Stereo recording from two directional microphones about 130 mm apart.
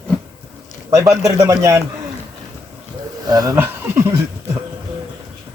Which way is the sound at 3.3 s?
30° right (ahead or behind).